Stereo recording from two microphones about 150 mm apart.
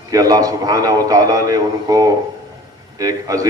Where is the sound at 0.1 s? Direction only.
25° right (ahead or behind).